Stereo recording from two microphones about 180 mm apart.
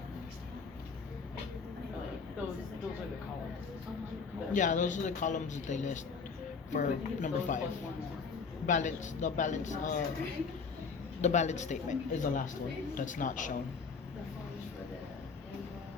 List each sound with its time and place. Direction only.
4.5 s speech: 45° left (ahead or behind)
8.6 s speech: 45° left (ahead or behind)
11.2 s a man's voice: 40° left (ahead or behind)